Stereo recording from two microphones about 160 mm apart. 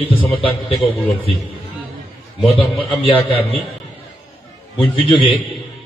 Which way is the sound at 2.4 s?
30° left (ahead or behind).